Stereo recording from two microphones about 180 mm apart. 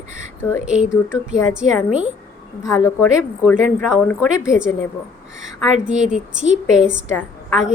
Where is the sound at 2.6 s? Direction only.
15° left (ahead or behind).